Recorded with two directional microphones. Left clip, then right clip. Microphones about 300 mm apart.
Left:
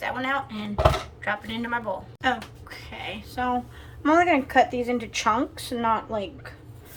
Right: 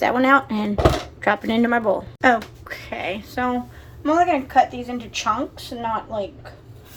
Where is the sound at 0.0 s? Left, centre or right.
Centre.